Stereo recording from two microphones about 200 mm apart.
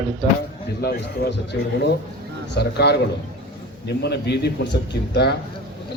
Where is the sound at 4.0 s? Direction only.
55° left (ahead or behind).